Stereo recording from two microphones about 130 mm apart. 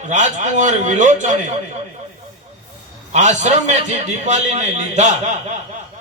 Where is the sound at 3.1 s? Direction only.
65° right (ahead or behind).